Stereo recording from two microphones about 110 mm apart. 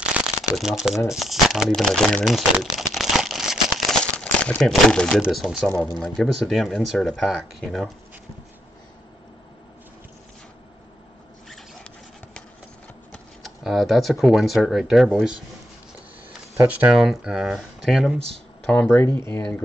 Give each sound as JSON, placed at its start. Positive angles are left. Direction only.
{"t": 0.2, "sound": "shuffling cards", "side_deg": -10}
{"t": 0.6, "sound": "speech", "side_deg": -5}
{"t": 2.2, "sound": "crumpling", "side_deg": 0}
{"t": 4.0, "sound": "crumpling", "side_deg": 10}
{"t": 5.2, "sound": "speech", "side_deg": 0}
{"t": 11.4, "sound": "zipper", "side_deg": 0}
{"t": 13.4, "sound": "speech", "side_deg": 0}
{"t": 16.6, "sound": "speech", "side_deg": -10}
{"t": 18.7, "sound": "speech", "side_deg": 10}
{"t": 19.1, "sound": "speech", "side_deg": 25}